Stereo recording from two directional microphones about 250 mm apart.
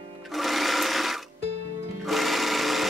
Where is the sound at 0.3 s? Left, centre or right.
Centre.